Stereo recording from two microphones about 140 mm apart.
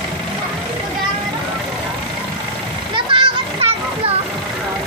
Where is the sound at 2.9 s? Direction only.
35° right (ahead or behind).